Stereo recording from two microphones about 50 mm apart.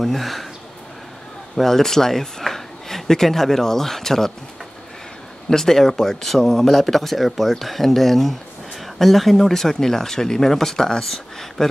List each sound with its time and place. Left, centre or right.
0.0 s speech: centre
1.6 s speech: centre
5.5 s speech: centre